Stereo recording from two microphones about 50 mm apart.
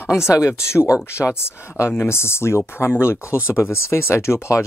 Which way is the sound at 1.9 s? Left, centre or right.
Left.